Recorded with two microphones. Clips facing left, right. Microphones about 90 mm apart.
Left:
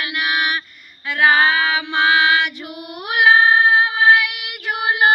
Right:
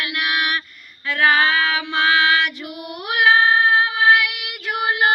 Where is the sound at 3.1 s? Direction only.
15° left (ahead or behind).